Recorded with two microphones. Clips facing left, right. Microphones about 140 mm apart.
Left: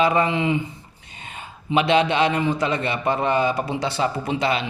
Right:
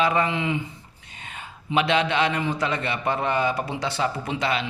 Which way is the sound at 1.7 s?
30° left (ahead or behind).